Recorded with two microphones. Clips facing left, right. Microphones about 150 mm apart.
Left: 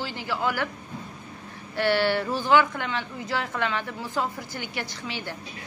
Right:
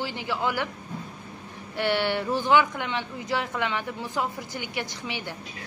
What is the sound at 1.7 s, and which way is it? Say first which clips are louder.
Speech: left 2 dB; 15° right (ahead or behind).